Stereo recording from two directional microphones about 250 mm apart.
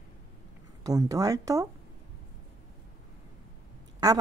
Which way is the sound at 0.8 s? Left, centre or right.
Centre.